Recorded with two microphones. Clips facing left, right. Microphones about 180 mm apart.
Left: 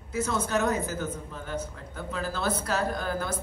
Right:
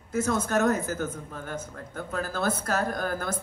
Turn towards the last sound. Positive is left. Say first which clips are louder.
# even
turn(degrees=-50)  # may be behind; listen again after turning